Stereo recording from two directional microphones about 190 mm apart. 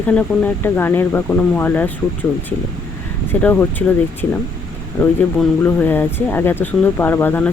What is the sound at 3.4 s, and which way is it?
Speech, 10° left (ahead or behind).